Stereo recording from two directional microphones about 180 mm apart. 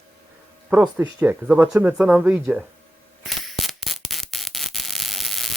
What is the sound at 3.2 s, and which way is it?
Mechanisms, centre (ahead or behind).